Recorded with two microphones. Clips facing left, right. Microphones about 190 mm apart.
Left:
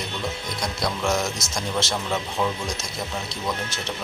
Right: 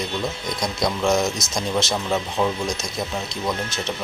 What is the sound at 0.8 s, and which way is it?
Speech, 20° right (ahead or behind).